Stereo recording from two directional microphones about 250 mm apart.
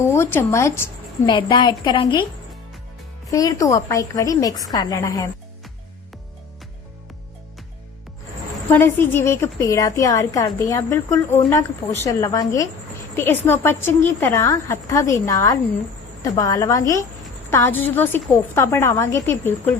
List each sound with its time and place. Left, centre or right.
0.0 s a woman's voice: centre
3.2 s a woman's voice: centre
8.7 s a woman's voice: centre